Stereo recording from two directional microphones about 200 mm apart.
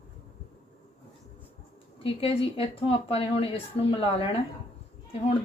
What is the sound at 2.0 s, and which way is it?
Speech, 30° left (ahead or behind).